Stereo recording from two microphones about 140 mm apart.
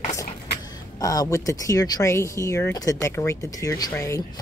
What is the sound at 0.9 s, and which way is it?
Speech, 25° left (ahead or behind).